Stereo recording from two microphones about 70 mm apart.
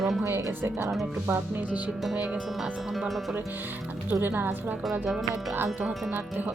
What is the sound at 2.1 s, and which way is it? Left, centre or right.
Speech, centre.